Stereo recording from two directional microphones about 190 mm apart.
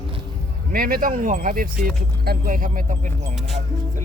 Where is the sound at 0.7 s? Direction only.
50° right (ahead or behind).